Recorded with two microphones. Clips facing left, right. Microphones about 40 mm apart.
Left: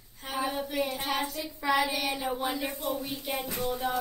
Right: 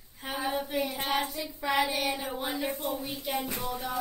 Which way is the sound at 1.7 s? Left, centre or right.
Centre.